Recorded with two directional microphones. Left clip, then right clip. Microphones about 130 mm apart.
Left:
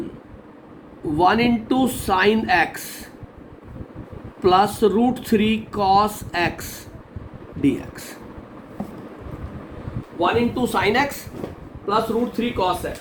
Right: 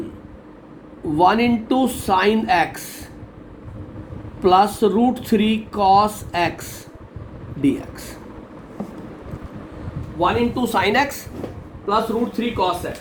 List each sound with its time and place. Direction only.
1.1 s speech: 5° right (ahead or behind)
2.1 s speech: 10° right (ahead or behind)
4.4 s speech: 5° right (ahead or behind)
10.2 s speech: 35° right (ahead or behind)
11.9 s speech: 30° right (ahead or behind)